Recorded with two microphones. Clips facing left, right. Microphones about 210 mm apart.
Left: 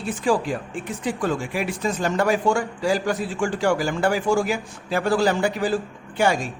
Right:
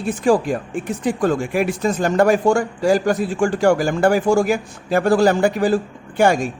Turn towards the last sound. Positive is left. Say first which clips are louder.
# right 5 dB
turn(degrees=-50)  # may be behind; listen again after turning